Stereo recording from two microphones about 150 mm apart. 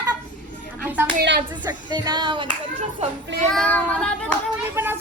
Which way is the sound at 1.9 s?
30° right (ahead or behind).